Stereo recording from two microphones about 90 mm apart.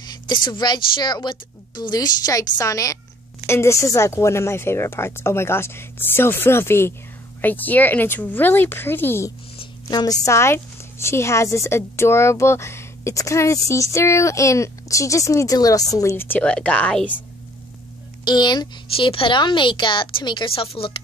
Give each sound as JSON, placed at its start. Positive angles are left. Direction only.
{"t": 0.0, "sound": "speech", "side_deg": 55}
{"t": 9.8, "sound": "a woman's voice", "side_deg": 45}
{"t": 16.2, "sound": "a woman's voice", "side_deg": 20}
{"t": 18.2, "sound": "speech", "side_deg": 55}
{"t": 18.9, "sound": "a woman's voice", "side_deg": 80}